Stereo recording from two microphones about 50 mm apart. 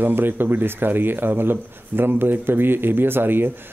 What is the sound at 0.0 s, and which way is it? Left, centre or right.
Speech, right.